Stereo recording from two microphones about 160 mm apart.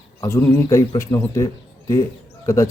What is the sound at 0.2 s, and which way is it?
Speech, 20° left (ahead or behind).